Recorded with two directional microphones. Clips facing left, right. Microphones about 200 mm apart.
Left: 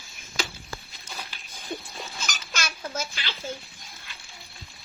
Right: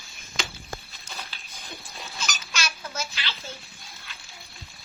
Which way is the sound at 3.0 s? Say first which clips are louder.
Left 1 dB; 50° left (ahead or behind).